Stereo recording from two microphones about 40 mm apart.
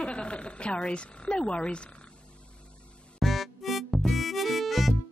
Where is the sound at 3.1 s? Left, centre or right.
Centre.